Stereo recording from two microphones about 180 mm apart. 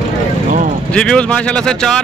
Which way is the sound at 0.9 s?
5° left (ahead or behind).